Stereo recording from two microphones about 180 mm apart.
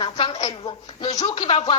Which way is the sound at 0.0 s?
30° left (ahead or behind).